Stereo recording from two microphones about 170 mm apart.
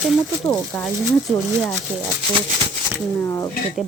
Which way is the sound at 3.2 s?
20° left (ahead or behind).